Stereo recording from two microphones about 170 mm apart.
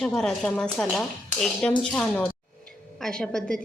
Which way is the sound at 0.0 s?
Centre (ahead or behind).